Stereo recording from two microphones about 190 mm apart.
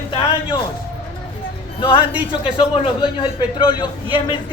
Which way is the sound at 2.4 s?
30° left (ahead or behind).